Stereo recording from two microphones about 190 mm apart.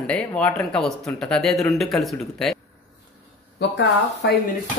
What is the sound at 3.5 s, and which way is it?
Speech, 65° left (ahead or behind).